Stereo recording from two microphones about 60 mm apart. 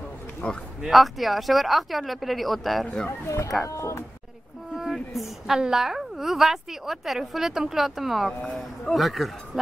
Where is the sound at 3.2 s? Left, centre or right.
Left.